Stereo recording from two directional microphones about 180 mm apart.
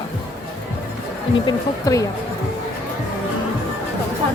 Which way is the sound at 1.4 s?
20° left (ahead or behind).